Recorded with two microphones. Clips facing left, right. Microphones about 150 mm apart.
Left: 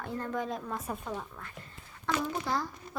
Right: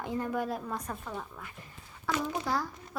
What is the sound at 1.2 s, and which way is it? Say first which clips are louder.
A woman's voice: even; 5° right (ahead or behind).